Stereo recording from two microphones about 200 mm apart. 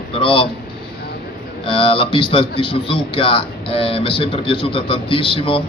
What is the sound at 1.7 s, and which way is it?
Speech, 25° left (ahead or behind).